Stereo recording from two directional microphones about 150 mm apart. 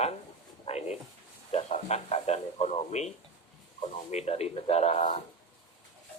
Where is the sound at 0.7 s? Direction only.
45° left (ahead or behind).